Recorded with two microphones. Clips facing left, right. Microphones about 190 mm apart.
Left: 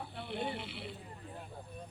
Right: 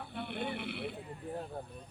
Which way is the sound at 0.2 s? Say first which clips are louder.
Right 1 dB; 55° right (ahead or behind).